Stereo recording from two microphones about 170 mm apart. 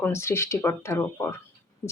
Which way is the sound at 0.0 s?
15° left (ahead or behind).